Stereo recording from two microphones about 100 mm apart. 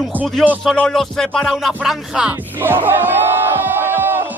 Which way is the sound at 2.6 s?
20° right (ahead or behind).